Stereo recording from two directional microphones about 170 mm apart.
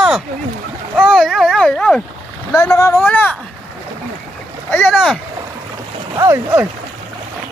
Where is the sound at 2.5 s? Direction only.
15° left (ahead or behind).